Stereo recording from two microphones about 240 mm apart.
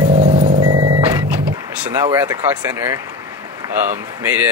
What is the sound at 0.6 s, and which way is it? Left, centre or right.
Music, right.